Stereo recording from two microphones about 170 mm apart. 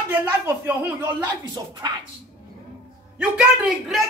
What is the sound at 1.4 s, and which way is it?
Speech, 25° right (ahead or behind).